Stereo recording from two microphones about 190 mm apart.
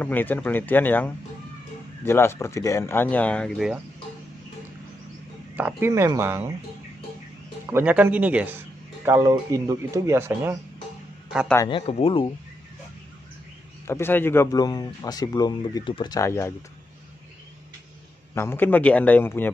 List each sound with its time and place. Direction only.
0.0 s speech: 10° left (ahead or behind)
5.6 s speech: 10° right (ahead or behind)
7.7 s a man's voice: 10° right (ahead or behind)
11.7 s speech: 30° left (ahead or behind)
13.8 s speech: 10° left (ahead or behind)
18.3 s speech: 15° left (ahead or behind)